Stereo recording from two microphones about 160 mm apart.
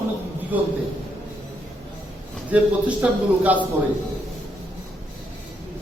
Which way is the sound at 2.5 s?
10° right (ahead or behind).